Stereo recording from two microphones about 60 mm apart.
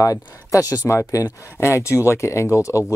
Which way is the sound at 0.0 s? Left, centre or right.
Left.